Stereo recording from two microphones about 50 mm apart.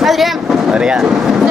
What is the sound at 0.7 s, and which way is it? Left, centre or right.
Speech, centre.